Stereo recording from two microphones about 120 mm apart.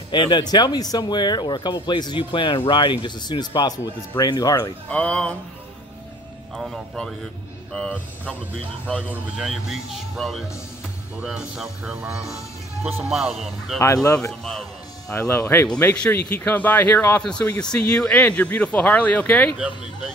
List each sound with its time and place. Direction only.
0.1 s speech: 40° left (ahead or behind)
4.8 s speech: 10° left (ahead or behind)
6.5 s speech: centre (ahead or behind)
9.1 s speech: 5° right (ahead or behind)
13.7 s speech: 25° left (ahead or behind)
14.4 s a man's voice: 5° left (ahead or behind)
15.1 s speech: 20° left (ahead or behind)